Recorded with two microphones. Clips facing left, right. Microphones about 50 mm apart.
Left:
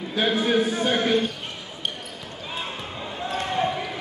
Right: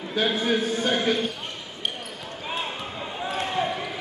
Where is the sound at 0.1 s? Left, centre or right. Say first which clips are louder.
Left 2 dB; centre.